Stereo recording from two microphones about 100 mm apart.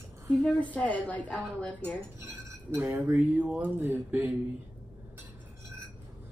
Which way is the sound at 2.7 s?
20° right (ahead or behind).